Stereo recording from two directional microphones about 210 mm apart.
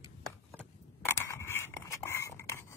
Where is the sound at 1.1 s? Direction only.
10° left (ahead or behind).